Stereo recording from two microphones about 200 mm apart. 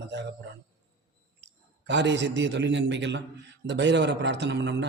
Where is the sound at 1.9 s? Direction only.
60° right (ahead or behind).